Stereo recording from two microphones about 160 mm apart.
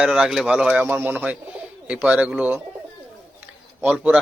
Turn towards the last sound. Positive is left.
turn(degrees=-5)  # may be behind; listen again after turning